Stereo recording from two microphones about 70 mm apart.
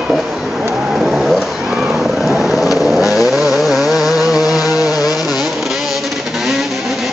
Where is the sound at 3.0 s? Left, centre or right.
Left.